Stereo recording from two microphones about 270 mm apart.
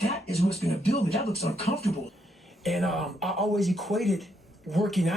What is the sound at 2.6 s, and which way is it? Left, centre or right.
Speech, centre.